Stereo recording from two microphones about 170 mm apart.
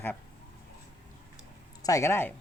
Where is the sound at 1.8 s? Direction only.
20° left (ahead or behind).